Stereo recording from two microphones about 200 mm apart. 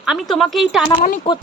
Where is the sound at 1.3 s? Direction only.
30° left (ahead or behind).